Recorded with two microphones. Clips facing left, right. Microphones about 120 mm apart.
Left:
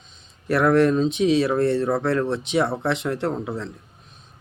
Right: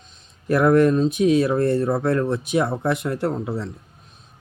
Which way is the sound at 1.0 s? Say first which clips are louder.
Right 2 dB; 90° left.